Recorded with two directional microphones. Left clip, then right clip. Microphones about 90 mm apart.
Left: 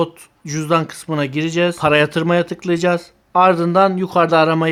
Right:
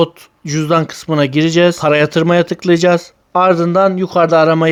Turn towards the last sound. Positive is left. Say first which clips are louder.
# right 3 dB
turn(degrees=-30)  # may be behind; listen again after turning